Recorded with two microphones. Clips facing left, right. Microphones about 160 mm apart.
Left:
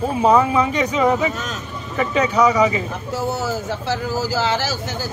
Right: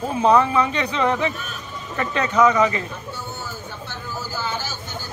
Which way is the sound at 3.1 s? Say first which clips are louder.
Left 11 dB; 90° left.